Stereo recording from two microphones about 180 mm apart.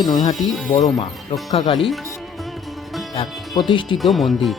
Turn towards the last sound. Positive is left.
turn(degrees=0)  # may be behind; listen again after turning